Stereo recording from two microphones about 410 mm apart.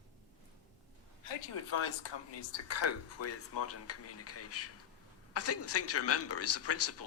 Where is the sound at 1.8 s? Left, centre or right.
Left.